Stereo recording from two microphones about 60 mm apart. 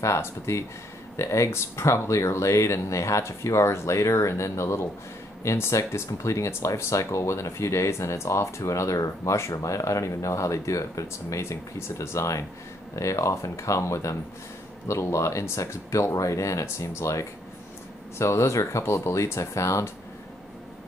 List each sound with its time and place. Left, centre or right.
0.0 s speech: left